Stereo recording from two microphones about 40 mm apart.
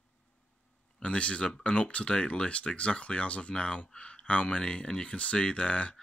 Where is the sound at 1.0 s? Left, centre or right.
Left.